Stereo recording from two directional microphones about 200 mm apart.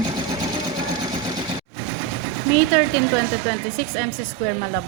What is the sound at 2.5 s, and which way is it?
Speech, 45° left (ahead or behind).